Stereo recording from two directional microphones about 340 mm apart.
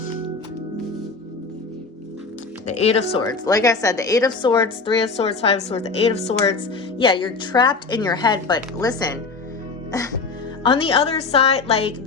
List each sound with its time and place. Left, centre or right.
2.6 s speech: centre